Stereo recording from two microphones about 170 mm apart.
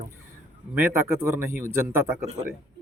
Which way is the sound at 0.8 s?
15° right (ahead or behind).